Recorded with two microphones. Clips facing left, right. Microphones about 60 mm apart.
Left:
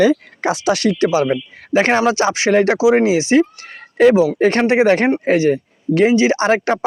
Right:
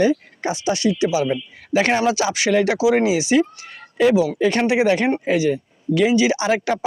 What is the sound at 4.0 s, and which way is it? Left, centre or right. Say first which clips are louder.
Speech: left 5 dB; left.